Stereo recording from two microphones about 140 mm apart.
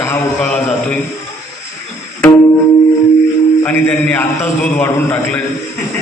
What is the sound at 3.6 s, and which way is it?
A man's voice, 15° left (ahead or behind).